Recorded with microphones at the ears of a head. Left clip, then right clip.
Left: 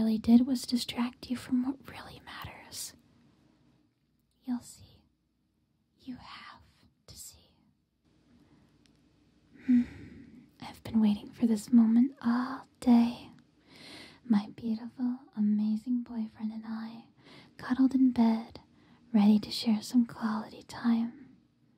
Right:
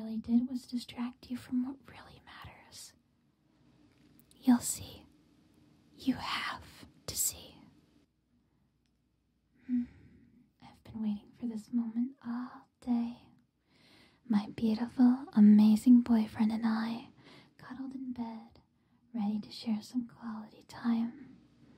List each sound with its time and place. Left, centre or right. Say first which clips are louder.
0.0 s speech: left 7 dB; left
4.4 s speech: right 9 dB; right
5.9 s whispering: right 12 dB; right
9.5 s whispering: left 8 dB; left
14.6 s speech: right 7 dB; right
17.6 s a woman's voice: left 17 dB; left